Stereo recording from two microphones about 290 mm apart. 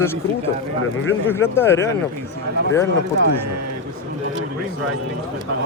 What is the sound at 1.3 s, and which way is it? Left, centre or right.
Speech, centre.